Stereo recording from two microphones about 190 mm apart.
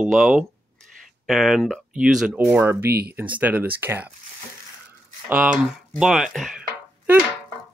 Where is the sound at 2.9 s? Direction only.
55° right (ahead or behind).